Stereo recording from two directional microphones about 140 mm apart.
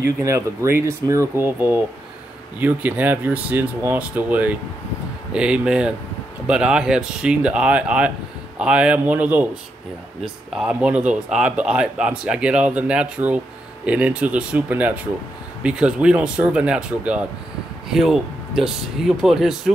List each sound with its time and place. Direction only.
0.2 s speech: 20° right (ahead or behind); by 19.7 s 5° right (ahead or behind)